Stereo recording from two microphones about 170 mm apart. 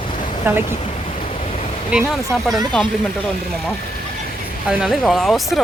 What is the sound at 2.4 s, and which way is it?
Speech, centre (ahead or behind).